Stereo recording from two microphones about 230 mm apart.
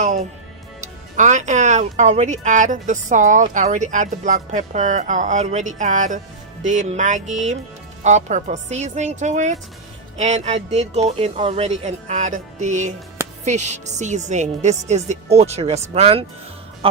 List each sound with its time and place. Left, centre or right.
0.0 s music: right
1.1 s a woman's voice: right